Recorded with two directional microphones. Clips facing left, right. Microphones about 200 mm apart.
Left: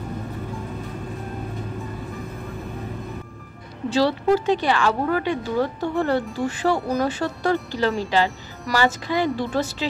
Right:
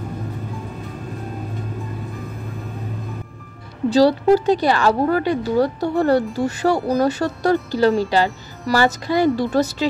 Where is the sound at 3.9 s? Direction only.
35° right (ahead or behind).